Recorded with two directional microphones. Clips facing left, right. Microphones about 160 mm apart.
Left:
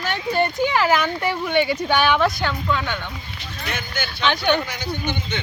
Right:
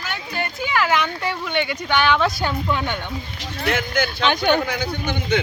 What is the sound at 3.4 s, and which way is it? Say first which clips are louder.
Speech: right 7 dB; 90° right.